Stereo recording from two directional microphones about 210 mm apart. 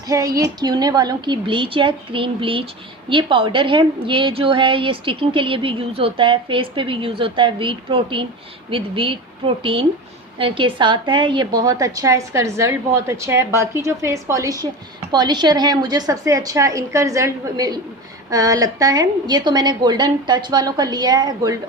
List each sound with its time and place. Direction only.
0.1 s a woman's voice: 15° right (ahead or behind)
10.3 s a woman's voice: 25° right (ahead or behind)